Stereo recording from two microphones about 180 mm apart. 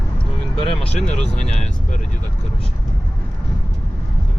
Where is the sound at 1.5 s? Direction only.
40° left (ahead or behind).